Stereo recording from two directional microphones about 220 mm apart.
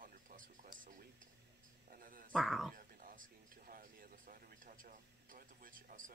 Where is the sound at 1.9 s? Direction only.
40° right (ahead or behind).